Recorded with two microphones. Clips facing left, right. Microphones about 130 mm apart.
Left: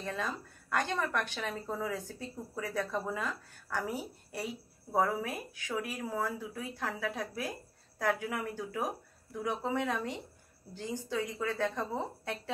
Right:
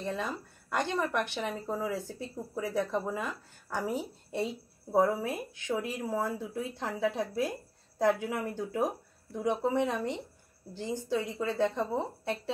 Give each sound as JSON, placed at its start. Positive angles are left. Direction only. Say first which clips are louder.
{"t": 0.0, "sound": "speech", "louder": "right 2 dB", "side_deg": -15}